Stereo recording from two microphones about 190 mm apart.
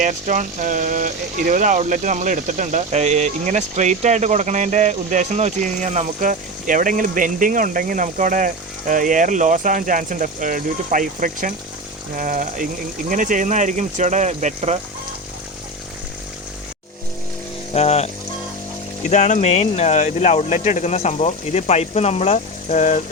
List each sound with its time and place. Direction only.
0.0 s speech: 40° right (ahead or behind)
17.7 s speech: 35° left (ahead or behind)
19.1 s speech: 35° left (ahead or behind)